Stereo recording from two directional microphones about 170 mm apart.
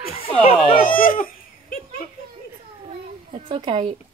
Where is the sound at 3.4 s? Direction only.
30° right (ahead or behind).